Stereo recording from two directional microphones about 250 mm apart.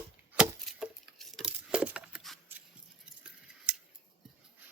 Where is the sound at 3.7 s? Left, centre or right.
Centre.